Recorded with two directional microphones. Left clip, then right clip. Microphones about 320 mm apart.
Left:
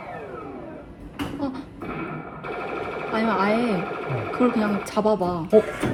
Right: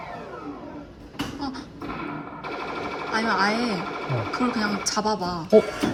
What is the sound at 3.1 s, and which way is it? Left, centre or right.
Sewing machine, centre.